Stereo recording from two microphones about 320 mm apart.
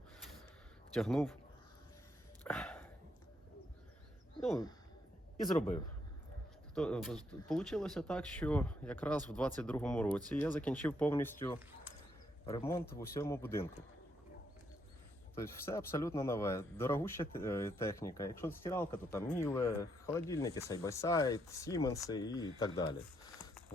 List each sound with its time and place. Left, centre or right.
0.9 s speech: centre
2.4 s a sound: centre
6.7 s speech: centre
12.8 s speech: left
13.1 s speech: centre
15.4 s speech: centre